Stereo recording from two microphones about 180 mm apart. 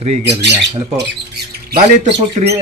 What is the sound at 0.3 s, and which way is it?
Speech, 70° right (ahead or behind).